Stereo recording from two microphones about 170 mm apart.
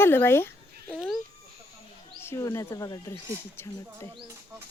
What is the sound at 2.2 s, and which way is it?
Speech, 15° left (ahead or behind).